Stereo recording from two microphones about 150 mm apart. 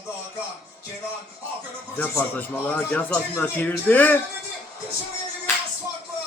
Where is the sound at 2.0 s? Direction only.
10° left (ahead or behind).